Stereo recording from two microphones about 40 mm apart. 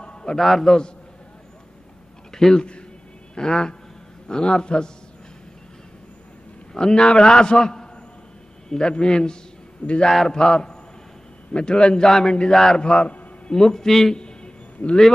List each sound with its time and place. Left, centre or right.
0.0 s a sound: left
0.4 s a man's voice: centre
0.7 s a man's voice: centre
2.3 s a man's voice: centre
6.7 s a man's voice: centre
13.6 s a man's voice: centre
14.1 s a sound: left